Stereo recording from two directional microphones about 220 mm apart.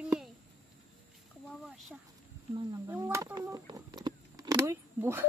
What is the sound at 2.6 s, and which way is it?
Speech, 10° right (ahead or behind).